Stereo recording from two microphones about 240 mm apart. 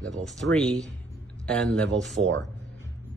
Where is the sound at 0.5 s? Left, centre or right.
Centre.